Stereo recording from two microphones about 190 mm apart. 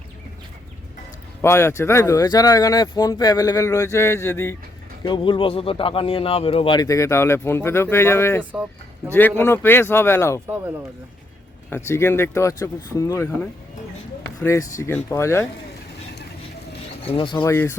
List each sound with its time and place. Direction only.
1.4 s speech: 15° left (ahead or behind)
5.0 s speech: 25° left (ahead or behind)
11.7 s speech: 15° left (ahead or behind)
17.1 s speech: 25° left (ahead or behind)
17.4 s speech: 15° left (ahead or behind)